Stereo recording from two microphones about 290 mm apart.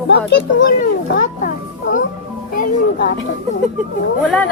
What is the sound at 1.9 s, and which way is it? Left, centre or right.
Music, left.